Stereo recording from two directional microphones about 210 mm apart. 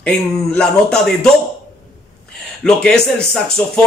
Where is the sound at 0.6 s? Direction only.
5° left (ahead or behind).